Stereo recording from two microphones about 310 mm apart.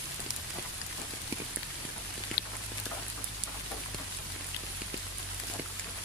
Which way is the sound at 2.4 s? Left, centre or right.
Left.